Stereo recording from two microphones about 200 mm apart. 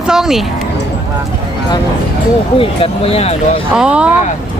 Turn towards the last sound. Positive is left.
turn(degrees=-5)  # may be behind; listen again after turning